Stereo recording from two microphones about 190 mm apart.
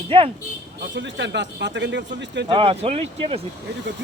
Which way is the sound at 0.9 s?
70° right (ahead or behind).